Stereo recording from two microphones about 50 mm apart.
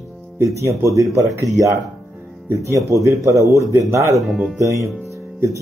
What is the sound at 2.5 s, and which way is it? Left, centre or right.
Speech, right.